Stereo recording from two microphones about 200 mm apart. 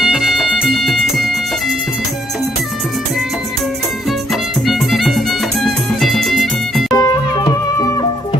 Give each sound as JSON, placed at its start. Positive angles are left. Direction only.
{"t": 0.0, "sound": "music", "side_deg": 0}
{"t": 4.3, "sound": "music", "side_deg": 0}
{"t": 6.9, "sound": "music", "side_deg": 15}